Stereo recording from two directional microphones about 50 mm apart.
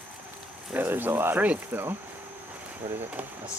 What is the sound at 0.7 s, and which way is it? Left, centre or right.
Speech, right.